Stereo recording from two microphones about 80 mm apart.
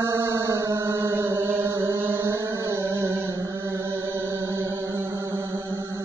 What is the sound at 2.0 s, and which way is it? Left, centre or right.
Music, right.